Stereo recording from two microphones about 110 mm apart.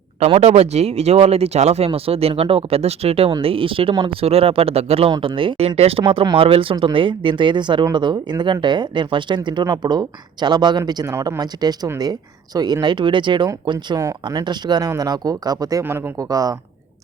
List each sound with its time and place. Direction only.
0.3 s speech: 65° right (ahead or behind)
5.2 s speech: 50° right (ahead or behind)
6.0 s speech: 55° right (ahead or behind); by 15.8 s 35° right (ahead or behind)
15.8 s speech: 20° right (ahead or behind)
16.3 s speech: 35° right (ahead or behind)